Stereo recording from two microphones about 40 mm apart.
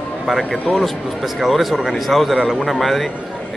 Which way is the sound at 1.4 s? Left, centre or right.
Centre.